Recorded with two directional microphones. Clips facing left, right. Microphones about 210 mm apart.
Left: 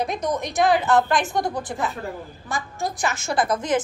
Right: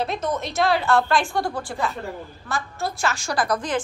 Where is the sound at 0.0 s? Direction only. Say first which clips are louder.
Left 1 dB; 15° left (ahead or behind).